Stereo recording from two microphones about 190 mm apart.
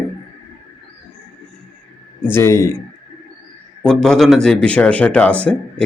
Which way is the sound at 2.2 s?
15° left (ahead or behind).